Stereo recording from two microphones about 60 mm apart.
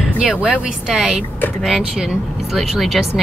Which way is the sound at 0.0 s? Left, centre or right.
Centre.